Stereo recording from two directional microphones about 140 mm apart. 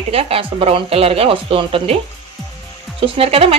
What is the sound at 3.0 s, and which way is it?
Speech, 45° right (ahead or behind).